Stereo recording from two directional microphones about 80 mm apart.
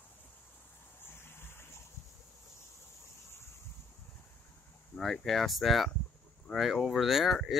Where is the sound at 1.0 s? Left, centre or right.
Left.